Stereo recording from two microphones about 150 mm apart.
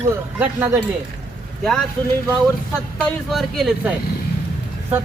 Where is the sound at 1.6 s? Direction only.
Centre (ahead or behind).